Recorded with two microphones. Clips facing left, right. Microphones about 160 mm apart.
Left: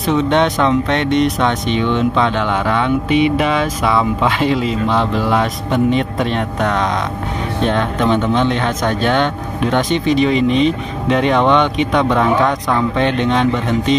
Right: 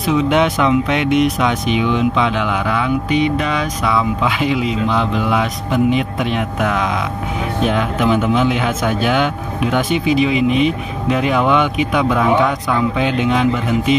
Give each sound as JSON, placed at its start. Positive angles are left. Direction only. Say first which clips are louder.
{"t": 0.0, "sound": "speech", "louder": "even", "side_deg": 0}